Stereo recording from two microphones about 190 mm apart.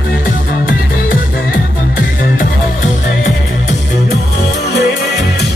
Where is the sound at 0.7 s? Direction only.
50° left (ahead or behind).